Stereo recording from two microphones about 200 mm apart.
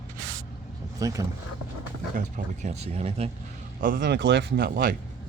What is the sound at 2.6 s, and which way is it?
Speech, 30° right (ahead or behind).